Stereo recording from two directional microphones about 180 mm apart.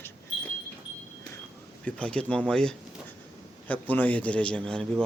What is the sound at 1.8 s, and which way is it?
A man's voice, 5° left (ahead or behind).